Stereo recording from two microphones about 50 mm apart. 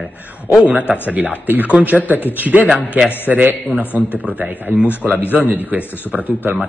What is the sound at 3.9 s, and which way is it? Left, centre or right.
Speech, left.